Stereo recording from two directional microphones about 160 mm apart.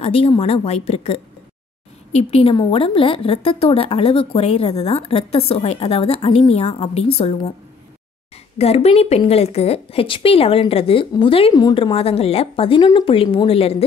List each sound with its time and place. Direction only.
0.0 s a woman's voice: 35° left (ahead or behind)
8.5 s a woman's voice: 40° left (ahead or behind)